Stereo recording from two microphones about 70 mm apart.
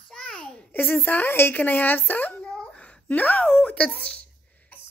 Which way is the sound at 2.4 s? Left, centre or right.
Centre.